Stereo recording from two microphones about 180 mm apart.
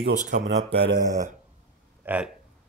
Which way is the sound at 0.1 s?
45° right (ahead or behind).